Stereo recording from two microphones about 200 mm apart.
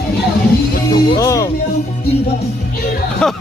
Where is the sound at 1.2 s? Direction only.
15° left (ahead or behind).